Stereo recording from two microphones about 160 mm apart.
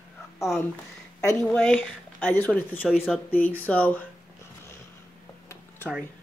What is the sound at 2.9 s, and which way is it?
Speech, 5° right (ahead or behind).